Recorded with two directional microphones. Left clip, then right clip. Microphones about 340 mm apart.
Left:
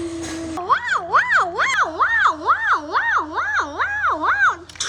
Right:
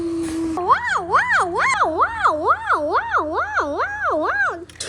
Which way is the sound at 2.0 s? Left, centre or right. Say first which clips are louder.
Left 1 dB; centre.